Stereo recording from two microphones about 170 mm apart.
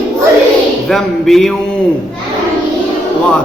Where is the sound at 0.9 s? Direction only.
Centre (ahead or behind).